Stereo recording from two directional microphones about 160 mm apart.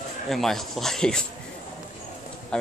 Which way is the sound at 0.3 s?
Centre (ahead or behind).